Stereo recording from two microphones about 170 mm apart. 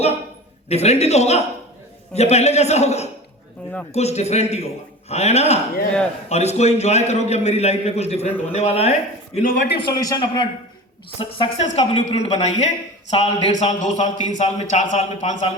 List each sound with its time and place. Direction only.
0.7 s a man's voice: 40° left (ahead or behind)
8.3 s speech: 10° left (ahead or behind)
8.5 s a man's voice: 40° left (ahead or behind)
9.4 s speech: 55° left (ahead or behind)
9.7 s a man's voice: 25° left (ahead or behind)
11.2 s a woman's voice: 35° left (ahead or behind)